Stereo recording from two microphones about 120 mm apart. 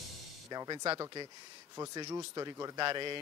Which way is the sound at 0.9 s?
35° right (ahead or behind).